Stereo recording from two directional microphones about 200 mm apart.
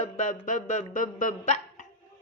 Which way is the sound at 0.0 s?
40° left (ahead or behind).